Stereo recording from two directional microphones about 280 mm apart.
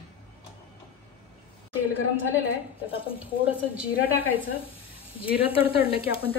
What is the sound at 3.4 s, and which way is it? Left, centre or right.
Speech, centre.